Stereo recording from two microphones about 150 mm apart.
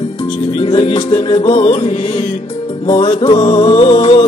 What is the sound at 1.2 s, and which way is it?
Music, 35° left (ahead or behind).